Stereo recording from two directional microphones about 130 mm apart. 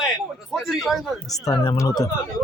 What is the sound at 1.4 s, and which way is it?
Speech, 30° left (ahead or behind).